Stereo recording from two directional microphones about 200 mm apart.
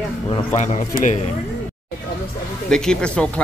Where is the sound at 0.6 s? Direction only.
35° left (ahead or behind).